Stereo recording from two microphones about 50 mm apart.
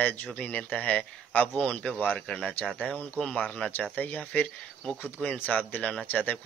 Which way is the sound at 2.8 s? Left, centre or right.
Left.